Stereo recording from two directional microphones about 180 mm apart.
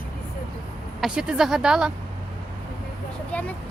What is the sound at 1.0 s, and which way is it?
Speech, 5° right (ahead or behind).